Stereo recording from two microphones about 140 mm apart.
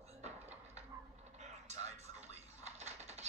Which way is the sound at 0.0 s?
50° right (ahead or behind).